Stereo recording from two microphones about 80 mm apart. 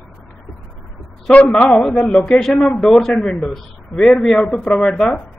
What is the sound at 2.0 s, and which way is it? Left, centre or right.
Speech, centre.